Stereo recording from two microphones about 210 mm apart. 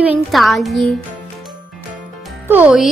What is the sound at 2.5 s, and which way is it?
Speech, 5° right (ahead or behind).